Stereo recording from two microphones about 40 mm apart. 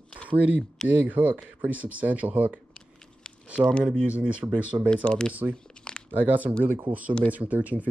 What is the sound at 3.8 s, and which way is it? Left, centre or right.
Speech, right.